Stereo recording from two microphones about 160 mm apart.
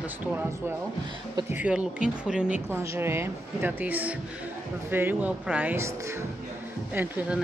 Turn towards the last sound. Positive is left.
turn(degrees=-10)  # may be behind; listen again after turning